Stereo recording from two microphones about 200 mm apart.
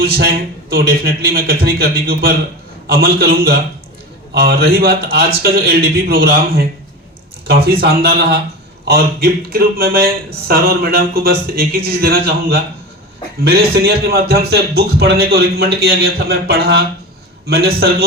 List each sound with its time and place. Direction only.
0.0 s a man's voice: 50° right (ahead or behind)